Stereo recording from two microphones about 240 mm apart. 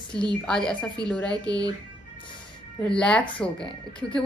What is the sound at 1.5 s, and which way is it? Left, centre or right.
Speech, centre.